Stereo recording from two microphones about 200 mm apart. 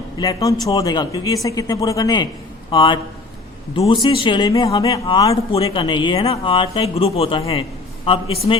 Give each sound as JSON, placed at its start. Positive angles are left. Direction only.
{"t": 0.2, "sound": "a man's voice", "side_deg": 15}